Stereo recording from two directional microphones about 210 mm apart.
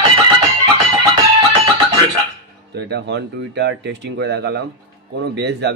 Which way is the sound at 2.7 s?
50° right (ahead or behind).